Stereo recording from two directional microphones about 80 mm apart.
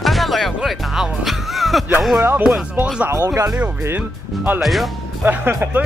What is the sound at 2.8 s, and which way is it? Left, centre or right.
Speech, centre.